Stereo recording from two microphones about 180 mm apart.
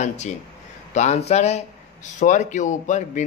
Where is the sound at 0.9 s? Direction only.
40° left (ahead or behind).